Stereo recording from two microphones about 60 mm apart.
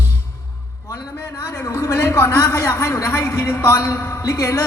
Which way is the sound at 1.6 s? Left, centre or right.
Left.